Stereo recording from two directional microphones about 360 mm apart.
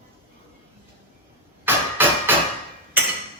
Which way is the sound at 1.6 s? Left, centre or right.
Centre.